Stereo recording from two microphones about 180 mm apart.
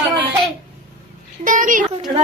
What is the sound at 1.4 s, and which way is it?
Speech, 45° right (ahead or behind).